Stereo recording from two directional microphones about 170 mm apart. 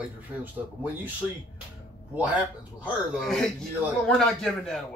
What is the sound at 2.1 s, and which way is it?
Speech, 10° right (ahead or behind).